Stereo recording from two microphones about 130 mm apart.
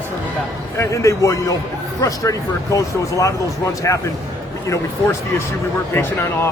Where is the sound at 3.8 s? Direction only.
25° left (ahead or behind).